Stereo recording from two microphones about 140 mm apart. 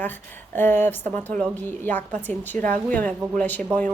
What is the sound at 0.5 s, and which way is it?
A woman's voice, 15° left (ahead or behind).